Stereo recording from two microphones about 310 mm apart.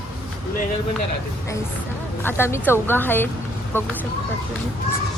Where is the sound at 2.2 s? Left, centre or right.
Centre.